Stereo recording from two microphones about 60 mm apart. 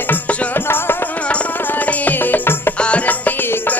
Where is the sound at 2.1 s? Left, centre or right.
Left.